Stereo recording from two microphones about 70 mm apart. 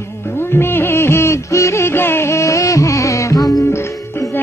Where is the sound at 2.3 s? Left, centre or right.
Left.